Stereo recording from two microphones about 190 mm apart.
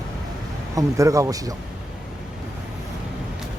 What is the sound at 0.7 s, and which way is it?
Speech, 15° right (ahead or behind).